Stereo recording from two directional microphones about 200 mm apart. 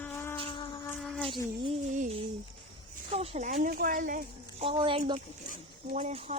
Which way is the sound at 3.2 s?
35° right (ahead or behind).